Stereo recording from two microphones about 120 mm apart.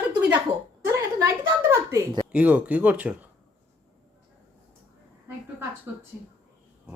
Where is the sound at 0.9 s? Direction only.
25° right (ahead or behind).